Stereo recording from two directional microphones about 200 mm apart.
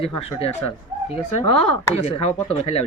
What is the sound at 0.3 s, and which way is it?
Speech, 30° left (ahead or behind).